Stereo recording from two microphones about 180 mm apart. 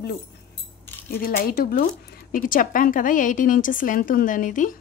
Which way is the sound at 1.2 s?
55° left (ahead or behind).